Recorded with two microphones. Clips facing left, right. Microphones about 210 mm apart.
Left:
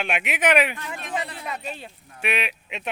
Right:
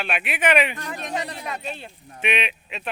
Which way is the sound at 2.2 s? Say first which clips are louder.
Right 2 dB; 5° left (ahead or behind).